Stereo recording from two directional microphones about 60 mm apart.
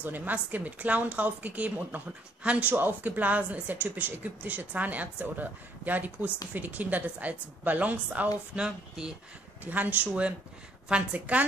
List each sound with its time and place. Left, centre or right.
0.0 s a woman's voice: right
8.5 s speech: centre
9.7 s a woman's voice: right